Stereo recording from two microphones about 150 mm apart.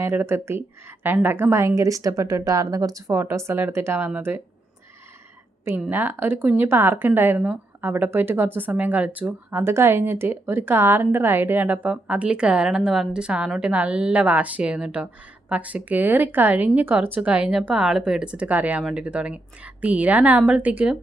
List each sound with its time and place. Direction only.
0.0 s speech: 15° right (ahead or behind)
5.9 s speech: 15° right (ahead or behind)